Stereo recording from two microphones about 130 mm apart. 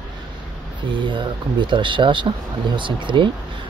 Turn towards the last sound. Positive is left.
turn(degrees=-40)  # may be behind; listen again after turning